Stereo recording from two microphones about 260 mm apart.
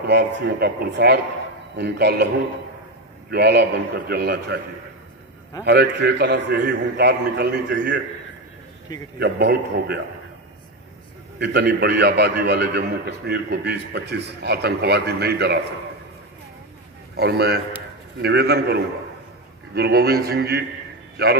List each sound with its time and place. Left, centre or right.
0.0 s a man's voice: right
3.3 s a man's voice: right
5.7 s a man's voice: right
9.2 s a man's voice: right
11.3 s a man's voice: right
17.2 s a man's voice: right